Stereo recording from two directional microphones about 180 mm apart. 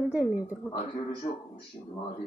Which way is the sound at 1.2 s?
35° left (ahead or behind).